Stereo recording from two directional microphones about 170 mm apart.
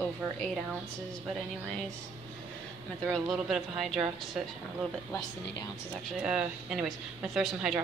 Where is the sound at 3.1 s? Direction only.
Centre (ahead or behind).